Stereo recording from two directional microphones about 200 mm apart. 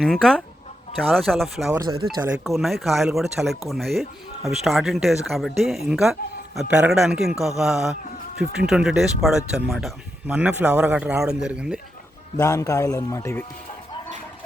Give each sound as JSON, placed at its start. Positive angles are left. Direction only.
{"t": 0.0, "sound": "speech", "side_deg": 5}
{"t": 1.7, "sound": "speech", "side_deg": -15}
{"t": 2.4, "sound": "speech", "side_deg": 0}
{"t": 12.4, "sound": "a man's voice", "side_deg": 15}